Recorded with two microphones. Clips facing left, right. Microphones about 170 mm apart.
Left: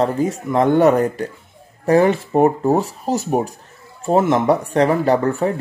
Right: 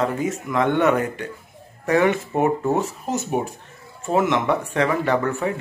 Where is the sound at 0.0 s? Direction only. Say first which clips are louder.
Left 4 dB; 35° left (ahead or behind).